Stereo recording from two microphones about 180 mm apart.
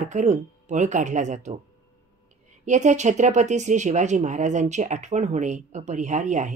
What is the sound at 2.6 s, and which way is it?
Speech, 40° right (ahead or behind).